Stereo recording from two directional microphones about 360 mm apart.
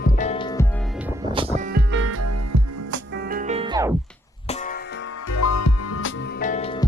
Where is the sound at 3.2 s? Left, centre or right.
Right.